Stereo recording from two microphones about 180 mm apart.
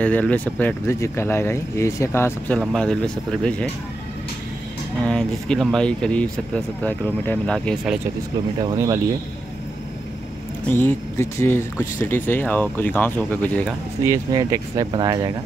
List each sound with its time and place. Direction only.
0.0 s speech: 10° left (ahead or behind)
5.0 s speech: 5° left (ahead or behind)
8.5 s speech: 20° right (ahead or behind)
10.7 s speech: 10° left (ahead or behind)
14.0 s speech: 20° right (ahead or behind)